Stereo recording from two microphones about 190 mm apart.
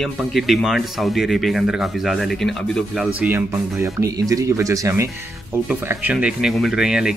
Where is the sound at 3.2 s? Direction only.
10° right (ahead or behind).